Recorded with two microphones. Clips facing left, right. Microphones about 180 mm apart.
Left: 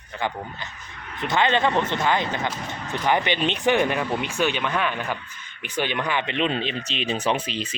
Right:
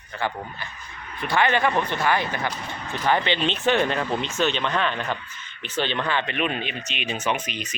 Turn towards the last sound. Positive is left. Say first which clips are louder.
# left 2 dB
turn(degrees=30)  # may be behind; listen again after turning